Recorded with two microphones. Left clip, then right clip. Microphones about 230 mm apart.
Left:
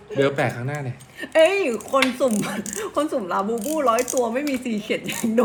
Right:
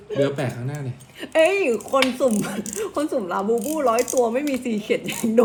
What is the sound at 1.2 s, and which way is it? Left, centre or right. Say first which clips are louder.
Speech: left 1 dB; centre.